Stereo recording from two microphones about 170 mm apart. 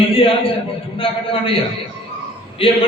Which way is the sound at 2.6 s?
30° left (ahead or behind).